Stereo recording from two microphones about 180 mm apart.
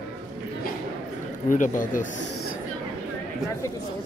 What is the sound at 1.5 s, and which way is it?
Speech, 45° left (ahead or behind).